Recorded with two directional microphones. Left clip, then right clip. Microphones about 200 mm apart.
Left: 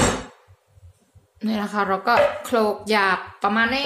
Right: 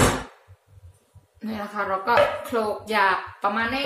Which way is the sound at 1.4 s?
50° left (ahead or behind).